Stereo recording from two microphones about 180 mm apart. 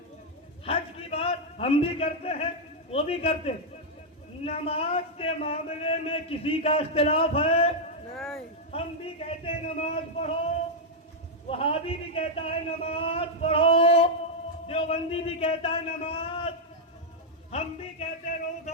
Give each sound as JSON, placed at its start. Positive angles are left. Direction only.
{"t": 0.6, "sound": "a sound", "side_deg": 35}
{"t": 2.9, "sound": "a man's voice", "side_deg": 35}
{"t": 8.1, "sound": "speech", "side_deg": 0}
{"t": 8.7, "sound": "a man's voice", "side_deg": 35}
{"t": 11.4, "sound": "a man's voice", "side_deg": 30}